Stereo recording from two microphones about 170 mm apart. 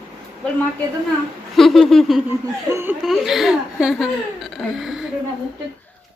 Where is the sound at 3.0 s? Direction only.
Centre (ahead or behind).